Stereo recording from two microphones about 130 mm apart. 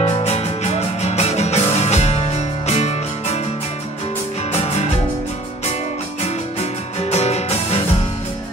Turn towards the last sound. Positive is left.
turn(degrees=55)  # may be behind; listen again after turning